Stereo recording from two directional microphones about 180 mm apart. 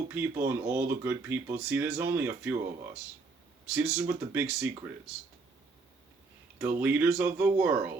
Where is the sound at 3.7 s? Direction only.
5° right (ahead or behind).